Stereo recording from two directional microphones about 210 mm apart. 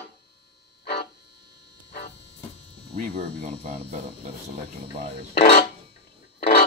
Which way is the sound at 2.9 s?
40° right (ahead or behind).